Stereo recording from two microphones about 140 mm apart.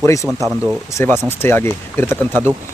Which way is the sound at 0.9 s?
15° left (ahead or behind).